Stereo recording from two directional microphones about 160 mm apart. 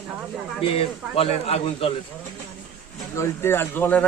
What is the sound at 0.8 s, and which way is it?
Speech, 35° left (ahead or behind).